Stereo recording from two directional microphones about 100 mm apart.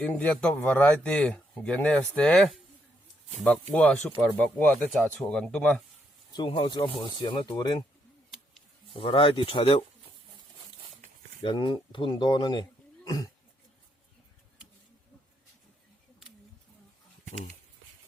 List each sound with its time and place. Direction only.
0.0 s speech: 15° left (ahead or behind)
6.3 s speech: 60° left (ahead or behind); by 7.9 s 40° left (ahead or behind)
8.9 s speech: 60° left (ahead or behind)
11.4 s speech: 55° left (ahead or behind)
13.1 s speech: 40° left (ahead or behind)